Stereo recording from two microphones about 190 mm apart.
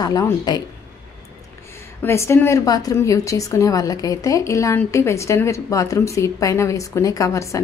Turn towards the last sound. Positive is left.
turn(degrees=15)  # may be behind; listen again after turning